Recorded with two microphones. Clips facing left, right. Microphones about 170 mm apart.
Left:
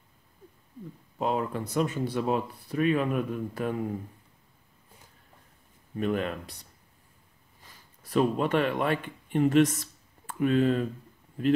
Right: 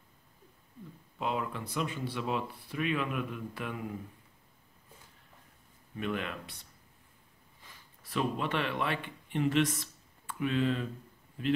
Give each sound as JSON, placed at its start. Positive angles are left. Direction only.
{"t": 1.1, "sound": "speech", "side_deg": 40}
{"t": 5.9, "sound": "speech", "side_deg": 40}
{"t": 8.1, "sound": "speech", "side_deg": 45}